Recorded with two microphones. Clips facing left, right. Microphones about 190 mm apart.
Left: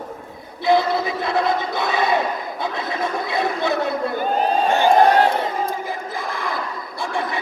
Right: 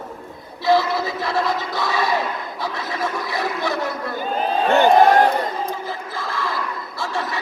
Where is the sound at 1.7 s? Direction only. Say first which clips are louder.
Even; 20° left (ahead or behind).